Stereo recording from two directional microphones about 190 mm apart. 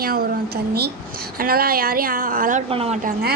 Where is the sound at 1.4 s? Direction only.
50° right (ahead or behind).